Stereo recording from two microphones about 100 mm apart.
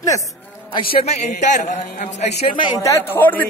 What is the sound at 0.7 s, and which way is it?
Speech, 65° left (ahead or behind).